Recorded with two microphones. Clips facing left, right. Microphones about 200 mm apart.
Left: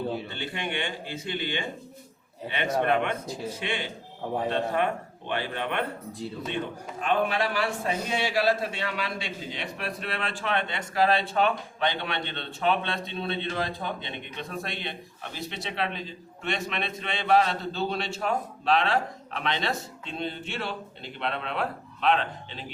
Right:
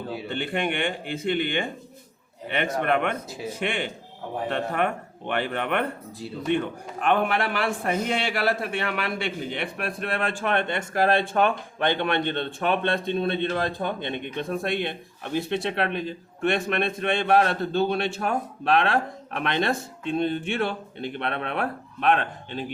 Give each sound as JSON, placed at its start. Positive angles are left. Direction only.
{"t": 0.3, "sound": "a man's voice", "side_deg": -55}
{"t": 7.0, "sound": "a man's voice", "side_deg": -55}